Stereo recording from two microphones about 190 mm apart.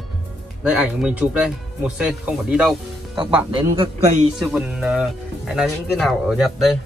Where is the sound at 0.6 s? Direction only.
5° right (ahead or behind).